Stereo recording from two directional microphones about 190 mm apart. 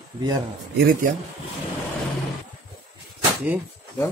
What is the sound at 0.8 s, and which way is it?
Speech, 50° right (ahead or behind).